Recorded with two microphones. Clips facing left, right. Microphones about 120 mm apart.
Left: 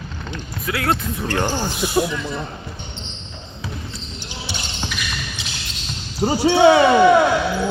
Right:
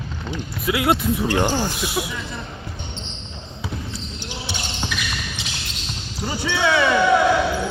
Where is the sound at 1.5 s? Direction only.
5° right (ahead or behind).